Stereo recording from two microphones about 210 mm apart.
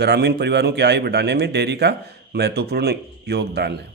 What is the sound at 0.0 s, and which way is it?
Speech, 50° right (ahead or behind).